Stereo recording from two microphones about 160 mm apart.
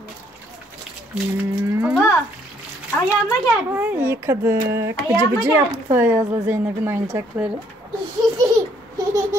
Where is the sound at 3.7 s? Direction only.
10° right (ahead or behind).